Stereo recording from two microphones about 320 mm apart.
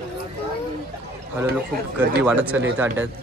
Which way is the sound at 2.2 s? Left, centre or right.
Centre.